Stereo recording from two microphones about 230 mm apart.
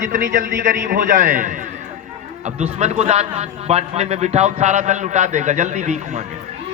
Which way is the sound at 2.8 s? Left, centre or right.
Right.